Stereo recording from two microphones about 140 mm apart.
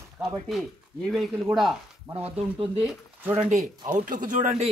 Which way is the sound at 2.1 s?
45° right (ahead or behind).